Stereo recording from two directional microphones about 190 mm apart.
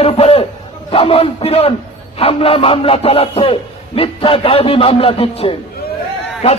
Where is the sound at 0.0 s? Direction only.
30° left (ahead or behind).